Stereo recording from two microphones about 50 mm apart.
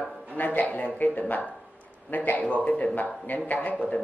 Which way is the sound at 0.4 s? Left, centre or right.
Left.